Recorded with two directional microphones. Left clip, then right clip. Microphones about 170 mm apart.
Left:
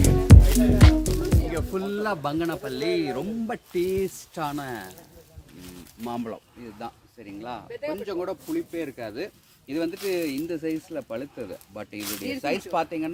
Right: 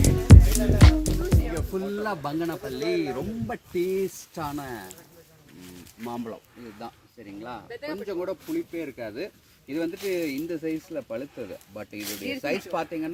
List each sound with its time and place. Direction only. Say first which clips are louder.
0.0 s music: left 1 dB; centre (ahead or behind)
1.5 s speech: left 2 dB; centre (ahead or behind)
6.1 s speech: left 2 dB; 5° left (ahead or behind)
11.9 s speech: left 1 dB; 25° left (ahead or behind)
12.4 s speech: left 3 dB; 5° left (ahead or behind)